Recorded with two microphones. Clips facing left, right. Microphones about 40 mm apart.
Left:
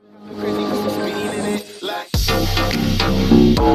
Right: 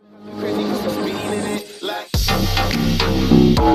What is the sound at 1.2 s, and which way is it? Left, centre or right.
Music, left.